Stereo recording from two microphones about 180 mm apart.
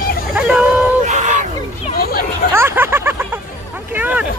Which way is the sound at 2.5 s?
15° right (ahead or behind).